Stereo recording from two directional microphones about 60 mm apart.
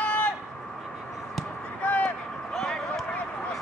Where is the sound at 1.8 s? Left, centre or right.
Left.